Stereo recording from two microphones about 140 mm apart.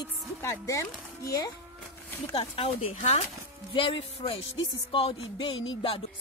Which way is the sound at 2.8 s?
60° left (ahead or behind).